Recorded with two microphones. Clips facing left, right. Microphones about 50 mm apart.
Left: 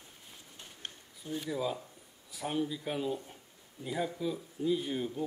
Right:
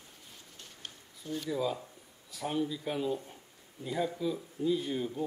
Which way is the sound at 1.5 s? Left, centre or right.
Centre.